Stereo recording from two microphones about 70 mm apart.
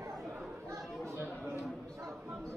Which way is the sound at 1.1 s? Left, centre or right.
Right.